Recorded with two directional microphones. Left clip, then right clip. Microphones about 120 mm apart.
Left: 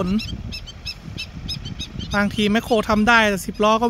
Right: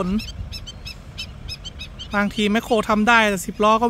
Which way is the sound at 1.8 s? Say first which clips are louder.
Left 3 dB; 35° left (ahead or behind).